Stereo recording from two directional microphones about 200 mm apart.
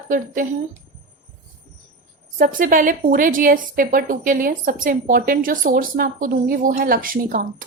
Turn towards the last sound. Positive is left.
turn(degrees=-45)  # may be behind; listen again after turning